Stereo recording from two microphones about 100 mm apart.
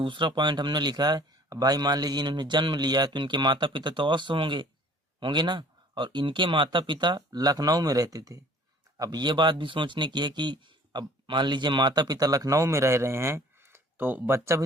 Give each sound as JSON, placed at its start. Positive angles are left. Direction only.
{"t": 0.0, "sound": "a man's voice", "side_deg": -55}